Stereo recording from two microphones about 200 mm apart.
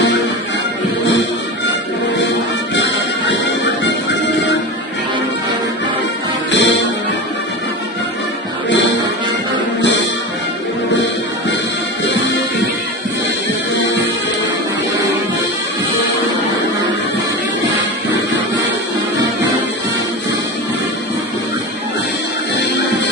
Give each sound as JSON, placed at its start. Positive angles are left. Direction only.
{"t": 6.5, "sound": "music", "side_deg": 60}